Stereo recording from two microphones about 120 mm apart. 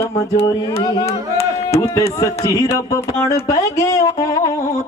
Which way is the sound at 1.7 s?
30° left (ahead or behind).